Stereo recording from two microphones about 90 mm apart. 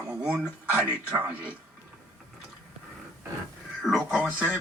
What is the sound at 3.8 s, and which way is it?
Speech, centre (ahead or behind).